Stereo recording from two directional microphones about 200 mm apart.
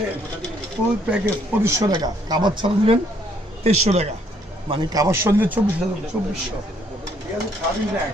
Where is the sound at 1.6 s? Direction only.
15° right (ahead or behind); by 4.0 s 35° right (ahead or behind).